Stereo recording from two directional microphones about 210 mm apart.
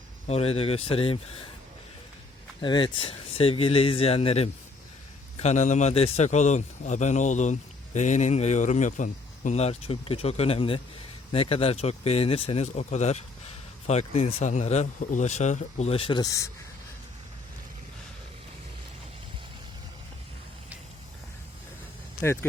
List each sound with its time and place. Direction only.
0.3 s speech: 30° left (ahead or behind)
2.6 s a man's voice: 20° left (ahead or behind)
22.2 s speech: 10° left (ahead or behind)